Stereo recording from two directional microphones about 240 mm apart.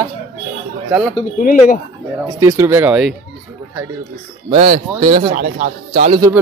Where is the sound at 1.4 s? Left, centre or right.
Left.